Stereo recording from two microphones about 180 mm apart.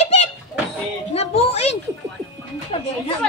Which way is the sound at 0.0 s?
35° left (ahead or behind).